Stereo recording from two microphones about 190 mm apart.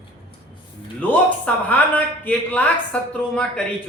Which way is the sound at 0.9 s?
10° left (ahead or behind).